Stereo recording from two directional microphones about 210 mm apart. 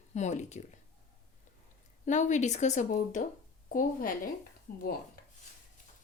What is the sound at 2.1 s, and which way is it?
Speech, 35° left (ahead or behind).